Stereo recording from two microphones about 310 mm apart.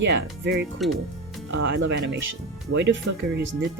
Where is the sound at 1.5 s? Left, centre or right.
Right.